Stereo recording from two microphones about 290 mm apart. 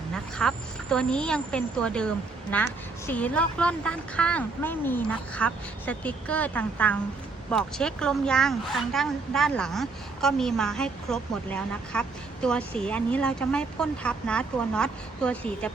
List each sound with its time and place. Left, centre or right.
0.1 s a woman's voice: centre